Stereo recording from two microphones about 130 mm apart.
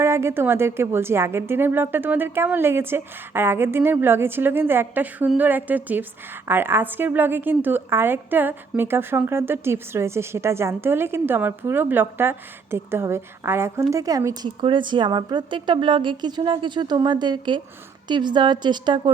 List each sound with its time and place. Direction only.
0.0 s a woman's voice: 20° right (ahead or behind)
14.4 s a woman's voice: 40° right (ahead or behind)